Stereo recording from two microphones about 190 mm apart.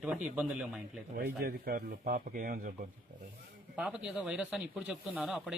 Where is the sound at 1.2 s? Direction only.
55° right (ahead or behind).